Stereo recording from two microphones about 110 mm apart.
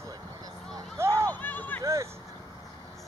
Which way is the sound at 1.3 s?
15° left (ahead or behind).